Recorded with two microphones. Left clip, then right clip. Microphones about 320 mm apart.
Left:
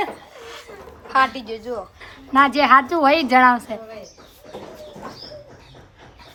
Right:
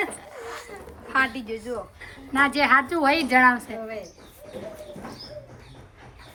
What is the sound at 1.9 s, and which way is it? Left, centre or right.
A woman's voice, centre.